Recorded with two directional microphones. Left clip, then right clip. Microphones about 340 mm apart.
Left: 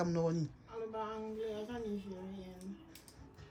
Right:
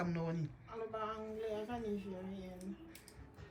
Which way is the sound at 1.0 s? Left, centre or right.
Centre.